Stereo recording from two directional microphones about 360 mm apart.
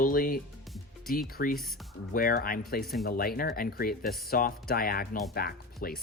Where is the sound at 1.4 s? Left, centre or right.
Left.